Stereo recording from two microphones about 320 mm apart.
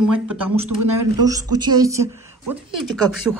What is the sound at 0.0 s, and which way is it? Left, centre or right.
Speech, right.